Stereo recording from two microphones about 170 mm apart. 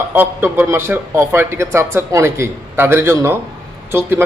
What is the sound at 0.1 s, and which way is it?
Speech, 10° right (ahead or behind).